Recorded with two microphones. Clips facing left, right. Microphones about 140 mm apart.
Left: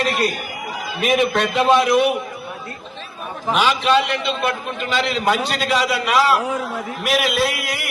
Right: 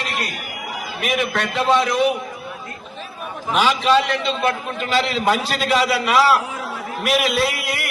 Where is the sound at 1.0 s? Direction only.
25° left (ahead or behind).